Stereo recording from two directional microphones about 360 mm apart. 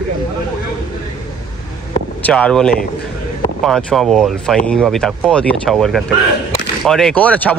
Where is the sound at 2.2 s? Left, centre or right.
Centre.